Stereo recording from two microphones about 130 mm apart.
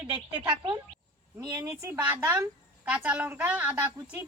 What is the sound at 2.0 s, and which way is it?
A woman's voice, 10° right (ahead or behind).